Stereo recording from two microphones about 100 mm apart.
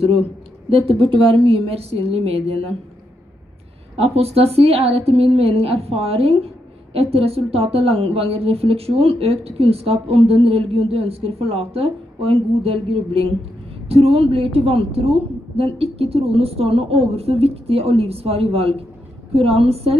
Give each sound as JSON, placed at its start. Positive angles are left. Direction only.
{"t": 0.7, "sound": "a woman's voice", "side_deg": -65}
{"t": 3.9, "sound": "a woman's voice", "side_deg": -85}